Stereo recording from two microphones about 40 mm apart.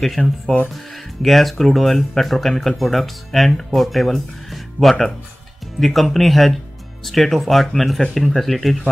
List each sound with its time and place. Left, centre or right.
0.2 s speech: left
0.7 s speech: centre